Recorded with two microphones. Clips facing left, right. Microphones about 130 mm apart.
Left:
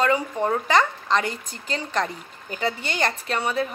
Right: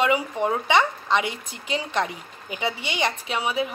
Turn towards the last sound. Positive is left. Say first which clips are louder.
# left 1 dB
turn(degrees=-5)  # may be behind; listen again after turning